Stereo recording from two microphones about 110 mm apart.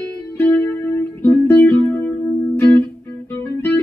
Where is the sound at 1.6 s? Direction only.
15° left (ahead or behind).